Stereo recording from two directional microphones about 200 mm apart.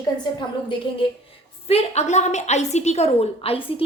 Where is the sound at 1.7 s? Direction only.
30° left (ahead or behind).